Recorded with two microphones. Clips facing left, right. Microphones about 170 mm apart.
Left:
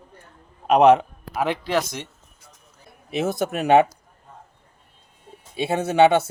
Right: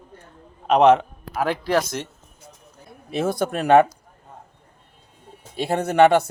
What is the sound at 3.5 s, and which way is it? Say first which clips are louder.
Speech: right 1 dB; 10° left (ahead or behind).